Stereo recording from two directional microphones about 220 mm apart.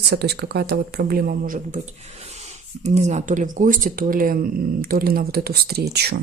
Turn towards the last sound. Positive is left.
turn(degrees=-45)  # may be behind; listen again after turning